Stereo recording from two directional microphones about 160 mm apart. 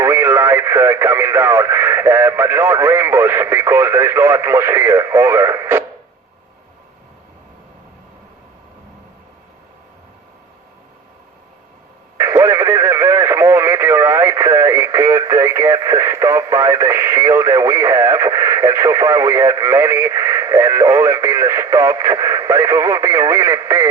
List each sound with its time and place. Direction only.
0.0 s speech: 15° right (ahead or behind)
12.1 s radio: 20° right (ahead or behind)